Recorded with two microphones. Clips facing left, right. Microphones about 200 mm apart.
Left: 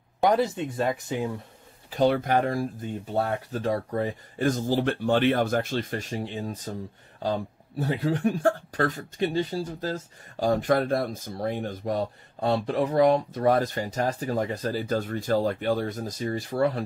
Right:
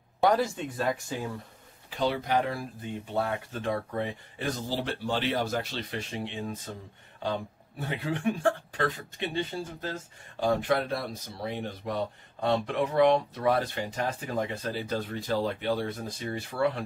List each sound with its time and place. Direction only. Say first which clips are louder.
0.2 s speech: left 2 dB; 20° left (ahead or behind)
1.9 s speech: left 6 dB; 50° left (ahead or behind)
3.2 s speech: left 3 dB; 40° left (ahead or behind)
7.8 s speech: left 5 dB; 40° left (ahead or behind)